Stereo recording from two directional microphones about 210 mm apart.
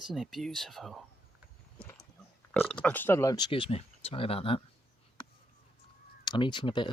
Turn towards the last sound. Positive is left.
turn(degrees=20)  # may be behind; listen again after turning